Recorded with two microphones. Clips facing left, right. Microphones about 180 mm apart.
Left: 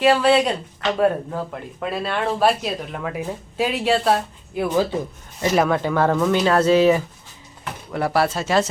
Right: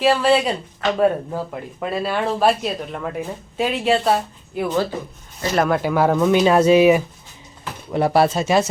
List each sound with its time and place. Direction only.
0.0 s speech: centre (ahead or behind)